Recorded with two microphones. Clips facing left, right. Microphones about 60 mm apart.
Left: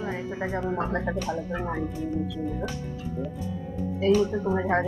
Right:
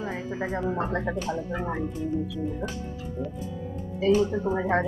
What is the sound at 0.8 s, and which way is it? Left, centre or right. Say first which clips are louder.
Speech: even; centre.